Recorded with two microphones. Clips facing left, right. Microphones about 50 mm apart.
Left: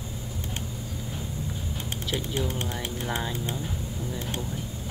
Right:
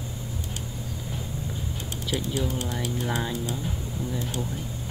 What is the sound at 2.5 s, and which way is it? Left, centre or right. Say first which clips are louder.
Speech: right 1 dB; left.